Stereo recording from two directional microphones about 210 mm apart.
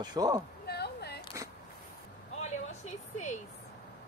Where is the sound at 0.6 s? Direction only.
50° left (ahead or behind).